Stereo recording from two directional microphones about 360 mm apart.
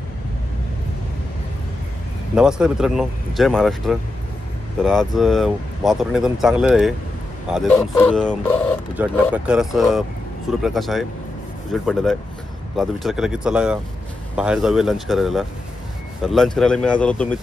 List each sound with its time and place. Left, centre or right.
2.3 s speech: centre